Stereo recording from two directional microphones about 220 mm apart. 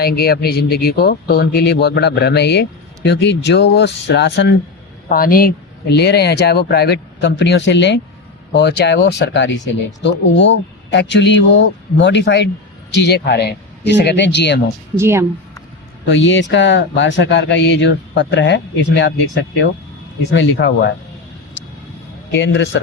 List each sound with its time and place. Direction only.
0.0 s speech: 45° left (ahead or behind)
14.9 s speech: 10° right (ahead or behind)
16.0 s speech: 55° left (ahead or behind)
22.3 s speech: 55° left (ahead or behind)